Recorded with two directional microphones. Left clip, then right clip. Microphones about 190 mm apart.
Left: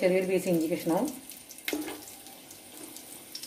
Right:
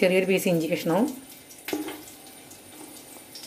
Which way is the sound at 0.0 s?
45° right (ahead or behind).